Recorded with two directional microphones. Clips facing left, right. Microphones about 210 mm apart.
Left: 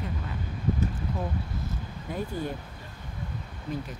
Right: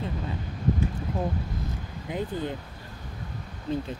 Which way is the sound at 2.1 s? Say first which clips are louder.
Right 2 dB; 20° right (ahead or behind).